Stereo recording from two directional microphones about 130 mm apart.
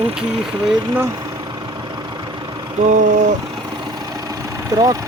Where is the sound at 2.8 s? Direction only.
75° right (ahead or behind).